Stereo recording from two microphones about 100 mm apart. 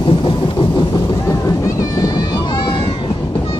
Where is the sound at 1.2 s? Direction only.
35° left (ahead or behind); by 3.6 s 60° left (ahead or behind).